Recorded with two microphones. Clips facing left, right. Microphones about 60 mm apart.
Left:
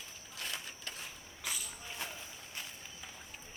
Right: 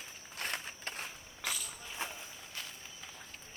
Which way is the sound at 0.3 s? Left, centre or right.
Right.